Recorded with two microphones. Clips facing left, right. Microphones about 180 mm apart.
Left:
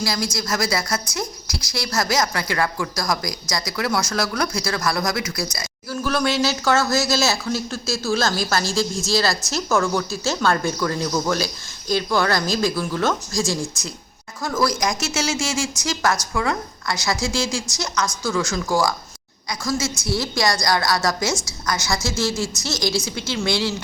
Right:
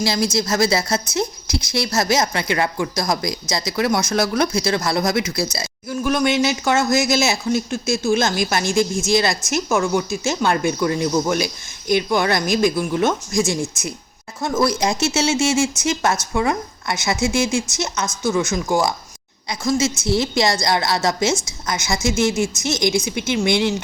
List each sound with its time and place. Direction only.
0.0 s speech: 25° right (ahead or behind)